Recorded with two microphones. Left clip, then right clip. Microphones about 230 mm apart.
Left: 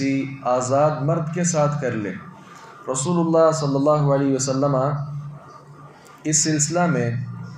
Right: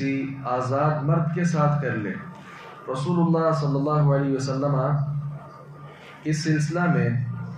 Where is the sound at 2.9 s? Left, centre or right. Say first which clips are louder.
Left 5 dB; left.